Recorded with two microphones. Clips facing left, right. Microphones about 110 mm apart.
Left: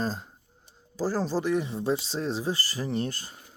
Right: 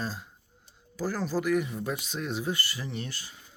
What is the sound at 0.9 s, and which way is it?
Speech, 35° left (ahead or behind).